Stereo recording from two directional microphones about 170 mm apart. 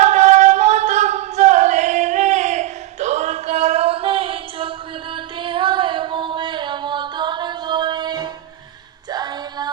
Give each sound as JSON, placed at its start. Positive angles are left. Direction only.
{"t": 0.0, "sound": "a sound", "side_deg": -40}
{"t": 5.1, "sound": "singing", "side_deg": -30}
{"t": 9.0, "sound": "female singing", "side_deg": -25}